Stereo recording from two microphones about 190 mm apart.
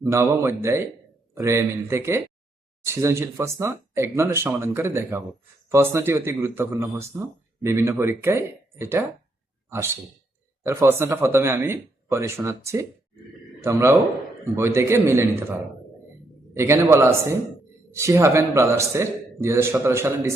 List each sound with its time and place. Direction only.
0.0 s a man's voice: 15° right (ahead or behind)
16.6 s speech: 15° right (ahead or behind)